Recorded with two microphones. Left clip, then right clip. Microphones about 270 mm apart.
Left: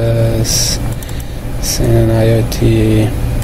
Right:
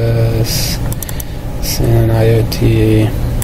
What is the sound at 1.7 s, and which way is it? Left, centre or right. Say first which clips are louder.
Speech: left 2 dB; centre.